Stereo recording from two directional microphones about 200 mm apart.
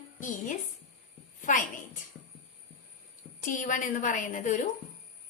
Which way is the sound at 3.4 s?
40° left (ahead or behind).